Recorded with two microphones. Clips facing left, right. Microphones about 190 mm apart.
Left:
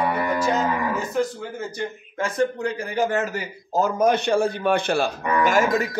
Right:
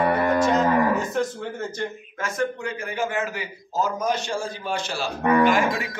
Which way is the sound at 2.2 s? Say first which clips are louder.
Left 4 dB; 35° left (ahead or behind).